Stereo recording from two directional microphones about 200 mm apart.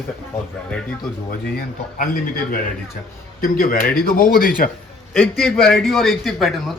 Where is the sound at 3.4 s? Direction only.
45° left (ahead or behind).